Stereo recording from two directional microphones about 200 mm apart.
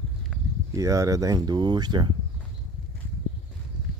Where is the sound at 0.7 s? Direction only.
15° right (ahead or behind).